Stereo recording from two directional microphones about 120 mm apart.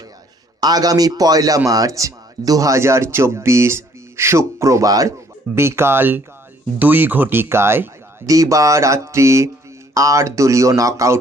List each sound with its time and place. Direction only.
0.6 s a man's voice: 30° right (ahead or behind)